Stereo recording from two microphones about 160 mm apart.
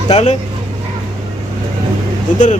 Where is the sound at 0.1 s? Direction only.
40° left (ahead or behind).